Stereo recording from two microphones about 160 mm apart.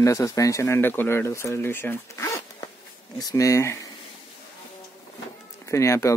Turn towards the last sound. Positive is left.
turn(degrees=20)  # may be behind; listen again after turning